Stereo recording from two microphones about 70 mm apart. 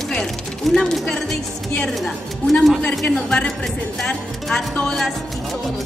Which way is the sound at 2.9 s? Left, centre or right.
Centre.